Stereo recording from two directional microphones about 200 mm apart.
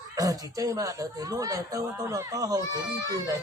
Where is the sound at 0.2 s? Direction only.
15° right (ahead or behind).